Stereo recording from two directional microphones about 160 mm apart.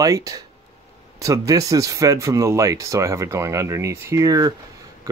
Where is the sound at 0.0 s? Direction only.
20° right (ahead or behind).